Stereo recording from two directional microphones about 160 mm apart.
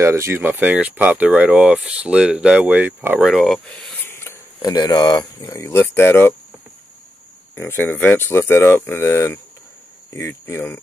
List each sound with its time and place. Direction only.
0.0 s speech: 15° right (ahead or behind); by 3.9 s centre (ahead or behind)
4.0 s a sound: 15° left (ahead or behind)
4.6 s speech: 25° left (ahead or behind)
7.5 s speech: 15° left (ahead or behind)